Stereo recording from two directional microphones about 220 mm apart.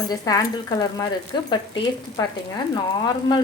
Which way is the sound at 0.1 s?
15° left (ahead or behind).